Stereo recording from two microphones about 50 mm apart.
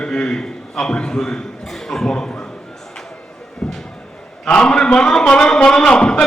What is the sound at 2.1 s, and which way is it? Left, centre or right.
Speech, centre.